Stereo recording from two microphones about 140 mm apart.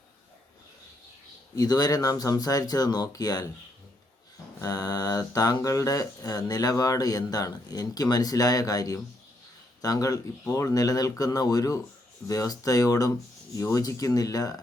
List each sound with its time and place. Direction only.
1.5 s speech: 25° left (ahead or behind)
4.6 s speech: 25° left (ahead or behind)